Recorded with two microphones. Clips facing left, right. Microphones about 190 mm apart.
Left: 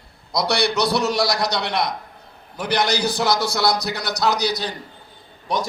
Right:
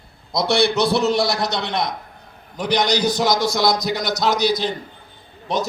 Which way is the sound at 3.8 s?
Centre (ahead or behind).